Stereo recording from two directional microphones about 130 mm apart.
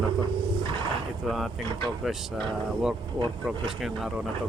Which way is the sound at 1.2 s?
Centre (ahead or behind).